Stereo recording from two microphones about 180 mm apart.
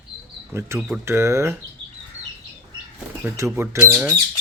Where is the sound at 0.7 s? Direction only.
Centre (ahead or behind).